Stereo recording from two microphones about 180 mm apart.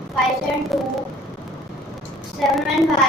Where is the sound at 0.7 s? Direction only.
Centre (ahead or behind).